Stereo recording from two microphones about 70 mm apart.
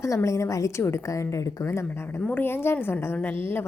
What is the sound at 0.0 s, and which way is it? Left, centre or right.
A woman's voice, left.